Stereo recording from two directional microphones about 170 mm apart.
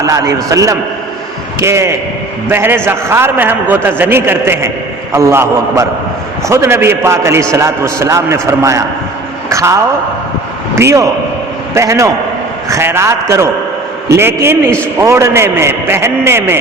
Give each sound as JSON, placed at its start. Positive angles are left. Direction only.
{"t": 0.0, "sound": "a man's voice", "side_deg": -20}
{"t": 10.8, "sound": "a man's voice", "side_deg": -15}